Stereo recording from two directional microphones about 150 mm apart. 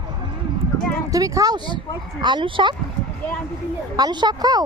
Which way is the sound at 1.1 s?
25° right (ahead or behind).